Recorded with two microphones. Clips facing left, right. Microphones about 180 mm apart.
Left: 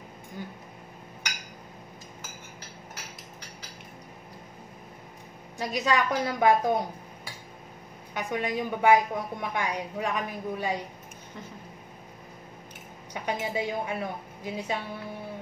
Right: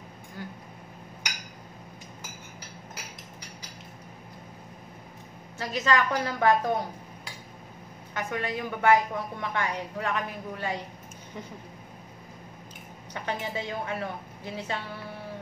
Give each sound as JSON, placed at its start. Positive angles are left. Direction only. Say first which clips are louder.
{"t": 5.6, "sound": "a woman's voice", "louder": "even", "side_deg": 15}
{"t": 8.1, "sound": "a woman's voice", "louder": "left 2 dB", "side_deg": 15}
{"t": 13.1, "sound": "a woman's voice", "louder": "left 2 dB", "side_deg": 15}